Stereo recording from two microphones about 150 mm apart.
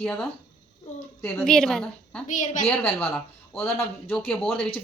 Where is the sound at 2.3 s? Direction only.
60° left (ahead or behind).